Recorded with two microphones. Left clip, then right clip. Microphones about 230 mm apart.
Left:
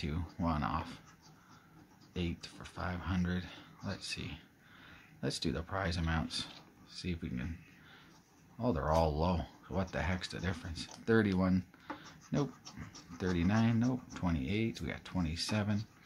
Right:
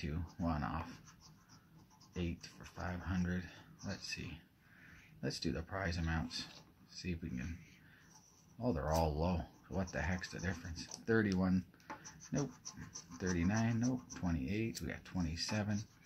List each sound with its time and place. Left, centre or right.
0.0 s speech: centre
2.1 s speech: centre
8.5 s speech: centre
12.6 s speech: centre
13.3 s speech: left